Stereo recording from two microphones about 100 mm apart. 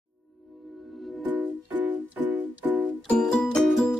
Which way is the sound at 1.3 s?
15° right (ahead or behind).